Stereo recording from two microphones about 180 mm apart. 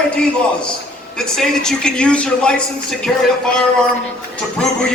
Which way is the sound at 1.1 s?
5° left (ahead or behind).